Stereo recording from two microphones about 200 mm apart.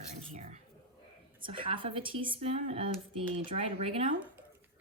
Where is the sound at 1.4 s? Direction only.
25° right (ahead or behind).